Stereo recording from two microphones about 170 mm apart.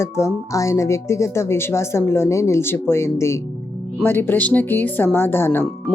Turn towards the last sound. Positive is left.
turn(degrees=15)  # may be behind; listen again after turning